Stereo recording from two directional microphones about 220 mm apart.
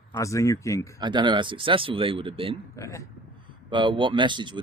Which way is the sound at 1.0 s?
20° right (ahead or behind).